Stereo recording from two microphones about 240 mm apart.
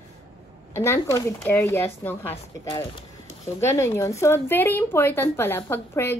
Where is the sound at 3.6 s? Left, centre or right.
Centre.